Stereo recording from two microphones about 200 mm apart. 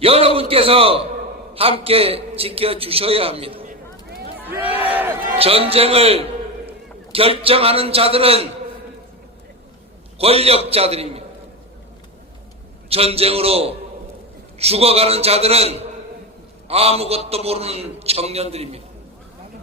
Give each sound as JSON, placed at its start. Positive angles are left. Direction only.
{"t": 0.0, "sound": "a man's voice", "side_deg": -30}
{"t": 3.6, "sound": "a sound", "side_deg": -45}
{"t": 4.4, "sound": "crowd", "side_deg": -10}
{"t": 5.4, "sound": "a man's voice", "side_deg": -30}
{"t": 10.2, "sound": "a man's voice", "side_deg": -30}
{"t": 12.9, "sound": "a man's voice", "side_deg": -30}